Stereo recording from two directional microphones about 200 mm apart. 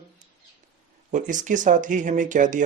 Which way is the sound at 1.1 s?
40° right (ahead or behind).